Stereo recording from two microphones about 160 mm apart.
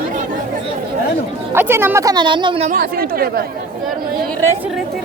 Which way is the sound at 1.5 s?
15° right (ahead or behind).